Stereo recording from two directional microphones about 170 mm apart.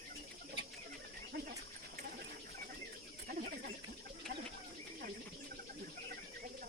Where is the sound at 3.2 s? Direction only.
65° right (ahead or behind).